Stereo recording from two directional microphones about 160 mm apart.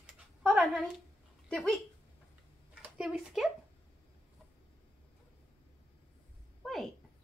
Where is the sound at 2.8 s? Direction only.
5° right (ahead or behind).